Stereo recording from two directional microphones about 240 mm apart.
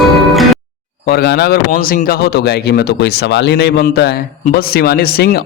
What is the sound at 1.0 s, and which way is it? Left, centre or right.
Speech, left.